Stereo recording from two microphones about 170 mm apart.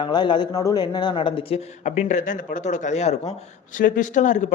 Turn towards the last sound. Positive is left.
turn(degrees=45)  # may be behind; listen again after turning